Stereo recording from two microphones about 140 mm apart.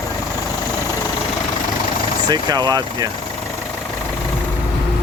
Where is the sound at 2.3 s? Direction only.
30° right (ahead or behind).